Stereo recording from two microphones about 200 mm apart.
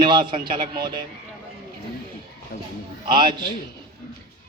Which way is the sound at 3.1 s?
25° right (ahead or behind).